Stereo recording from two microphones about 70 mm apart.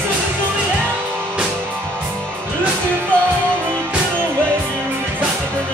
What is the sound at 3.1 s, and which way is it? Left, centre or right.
Music, centre.